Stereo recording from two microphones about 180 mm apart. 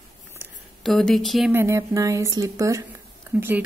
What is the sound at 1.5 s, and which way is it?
Speech, 15° right (ahead or behind).